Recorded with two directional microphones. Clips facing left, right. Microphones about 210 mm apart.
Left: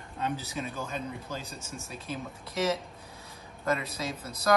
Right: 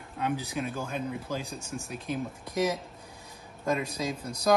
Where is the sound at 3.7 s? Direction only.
Centre (ahead or behind).